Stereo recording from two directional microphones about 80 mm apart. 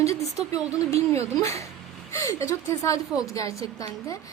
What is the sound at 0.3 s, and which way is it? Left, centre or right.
A woman's voice, left.